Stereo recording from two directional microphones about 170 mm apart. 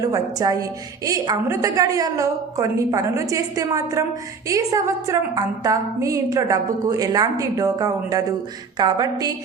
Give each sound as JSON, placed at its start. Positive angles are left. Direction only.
{"t": 0.0, "sound": "a woman's voice", "side_deg": -20}